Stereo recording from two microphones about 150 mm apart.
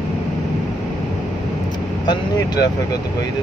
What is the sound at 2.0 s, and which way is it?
Vehicle, 25° left (ahead or behind).